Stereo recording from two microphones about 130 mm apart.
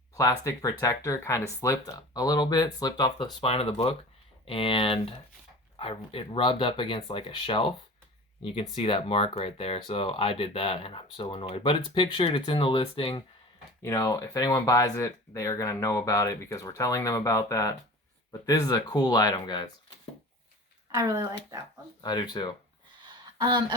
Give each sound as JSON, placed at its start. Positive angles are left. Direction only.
{"t": 0.2, "sound": "speech", "side_deg": 25}
{"t": 3.4, "sound": "speech", "side_deg": 50}
{"t": 8.7, "sound": "speech", "side_deg": 40}
{"t": 13.8, "sound": "speech", "side_deg": 25}
{"t": 20.9, "sound": "speech", "side_deg": -25}
{"t": 22.0, "sound": "speech", "side_deg": 35}
{"t": 23.0, "sound": "a sound", "side_deg": -35}